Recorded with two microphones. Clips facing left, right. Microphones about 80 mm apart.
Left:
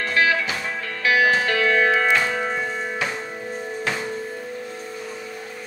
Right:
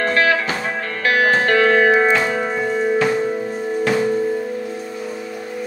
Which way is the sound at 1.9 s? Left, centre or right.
Right.